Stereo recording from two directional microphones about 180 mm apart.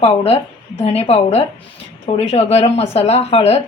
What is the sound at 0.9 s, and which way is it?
A woman's voice, 35° left (ahead or behind).